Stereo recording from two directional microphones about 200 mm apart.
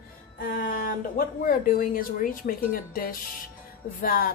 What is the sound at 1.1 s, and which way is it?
Speech, 45° left (ahead or behind).